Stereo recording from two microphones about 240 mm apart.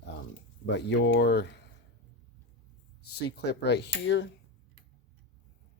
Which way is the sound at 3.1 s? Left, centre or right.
Left.